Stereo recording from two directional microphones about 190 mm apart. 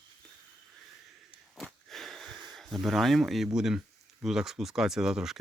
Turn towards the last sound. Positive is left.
turn(degrees=-5)  # may be behind; listen again after turning